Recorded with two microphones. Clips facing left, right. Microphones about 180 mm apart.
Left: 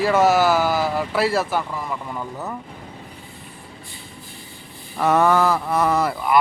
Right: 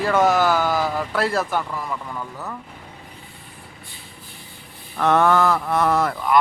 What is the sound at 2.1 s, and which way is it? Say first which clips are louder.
Speech: left 2 dB; 15° left (ahead or behind).